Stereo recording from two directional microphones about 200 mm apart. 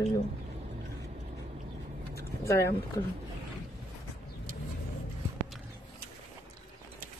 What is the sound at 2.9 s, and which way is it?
Speech, 15° left (ahead or behind).